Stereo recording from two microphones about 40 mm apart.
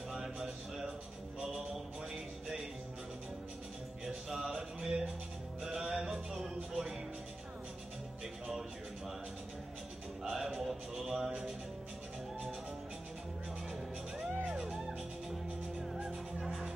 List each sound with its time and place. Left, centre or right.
0.1 s a sound: centre
4.0 s music: centre
10.3 s a sound: centre
14.1 s music: centre
14.4 s music: right
16.0 s music: right
16.4 s music: centre